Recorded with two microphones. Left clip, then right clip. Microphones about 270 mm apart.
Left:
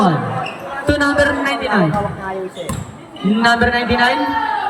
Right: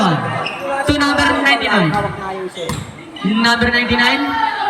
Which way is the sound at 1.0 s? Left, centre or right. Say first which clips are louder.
Left 1 dB; left.